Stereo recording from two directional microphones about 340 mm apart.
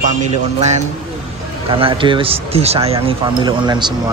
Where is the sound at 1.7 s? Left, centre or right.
Centre.